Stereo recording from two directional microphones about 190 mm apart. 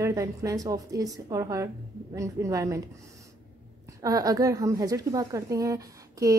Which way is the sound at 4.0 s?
20° right (ahead or behind).